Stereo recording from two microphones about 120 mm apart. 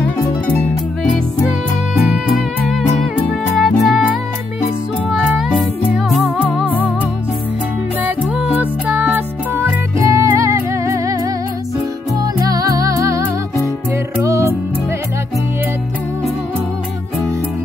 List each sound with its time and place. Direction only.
0.5 s harp: 15° left (ahead or behind)
3.5 s music: centre (ahead or behind)
5.1 s music: 5° right (ahead or behind)
6.7 s music: 15° left (ahead or behind)
8.0 s music: 15° right (ahead or behind)
12.2 s music: 30° right (ahead or behind)
14.2 s music: 25° right (ahead or behind)